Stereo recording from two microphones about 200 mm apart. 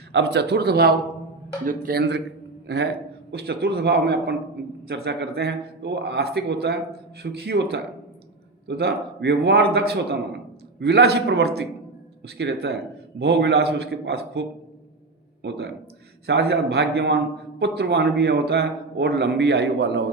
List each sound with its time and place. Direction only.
0.1 s a man's voice: 60° right (ahead or behind)
15.4 s a man's voice: 55° right (ahead or behind)